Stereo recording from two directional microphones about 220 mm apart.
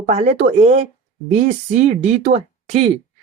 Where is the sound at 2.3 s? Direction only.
30° right (ahead or behind).